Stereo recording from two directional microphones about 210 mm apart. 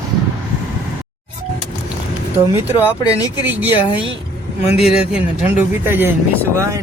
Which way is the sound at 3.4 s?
10° right (ahead or behind).